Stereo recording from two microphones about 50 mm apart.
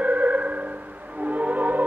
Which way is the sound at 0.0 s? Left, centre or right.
Right.